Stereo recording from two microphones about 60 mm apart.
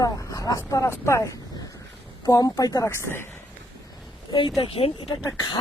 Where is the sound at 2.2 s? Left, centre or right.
Left.